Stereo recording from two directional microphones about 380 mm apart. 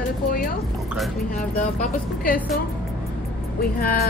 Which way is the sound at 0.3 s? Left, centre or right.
Left.